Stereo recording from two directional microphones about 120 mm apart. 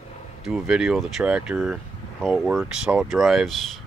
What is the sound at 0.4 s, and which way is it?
Speech, centre (ahead or behind).